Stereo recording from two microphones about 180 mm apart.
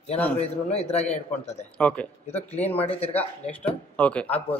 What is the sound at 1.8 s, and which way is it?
Speech, 5° left (ahead or behind).